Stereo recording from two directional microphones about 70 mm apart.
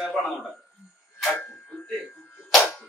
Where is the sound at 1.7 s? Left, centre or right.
Centre.